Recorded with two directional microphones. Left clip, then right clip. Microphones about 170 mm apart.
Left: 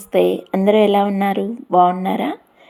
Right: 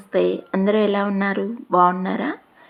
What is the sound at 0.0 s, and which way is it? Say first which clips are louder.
Speech: left 4 dB; 20° left (ahead or behind).